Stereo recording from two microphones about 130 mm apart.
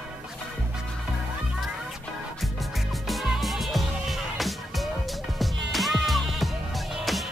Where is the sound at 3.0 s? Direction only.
Centre (ahead or behind).